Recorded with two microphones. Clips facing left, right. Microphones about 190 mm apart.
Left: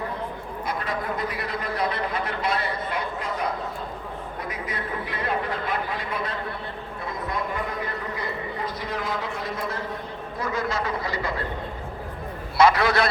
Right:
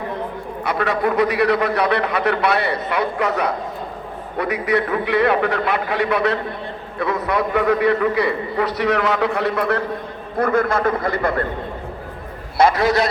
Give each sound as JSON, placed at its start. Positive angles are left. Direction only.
{"t": 0.6, "sound": "a man's voice", "side_deg": -70}
{"t": 12.5, "sound": "a man's voice", "side_deg": -50}